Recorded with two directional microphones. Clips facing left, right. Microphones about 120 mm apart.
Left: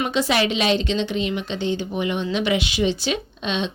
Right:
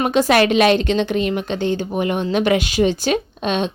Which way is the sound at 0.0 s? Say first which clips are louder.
Right 6 dB; 50° right (ahead or behind).